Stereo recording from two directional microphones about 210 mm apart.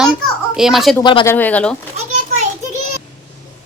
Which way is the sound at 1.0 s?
20° left (ahead or behind).